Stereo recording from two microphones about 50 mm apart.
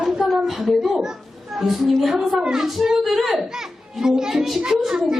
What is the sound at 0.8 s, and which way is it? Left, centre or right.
A child's voice, centre.